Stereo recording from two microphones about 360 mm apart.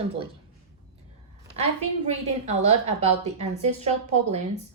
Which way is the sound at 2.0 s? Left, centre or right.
Centre.